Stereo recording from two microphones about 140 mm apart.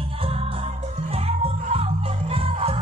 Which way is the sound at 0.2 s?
45° right (ahead or behind).